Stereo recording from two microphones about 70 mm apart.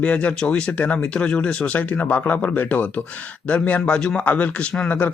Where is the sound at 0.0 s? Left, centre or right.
Centre.